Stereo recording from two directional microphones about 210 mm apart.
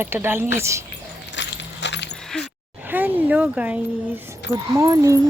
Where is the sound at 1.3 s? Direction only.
55° left (ahead or behind).